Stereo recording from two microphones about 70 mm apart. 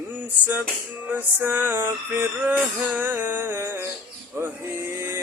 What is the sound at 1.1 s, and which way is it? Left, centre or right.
Music, right.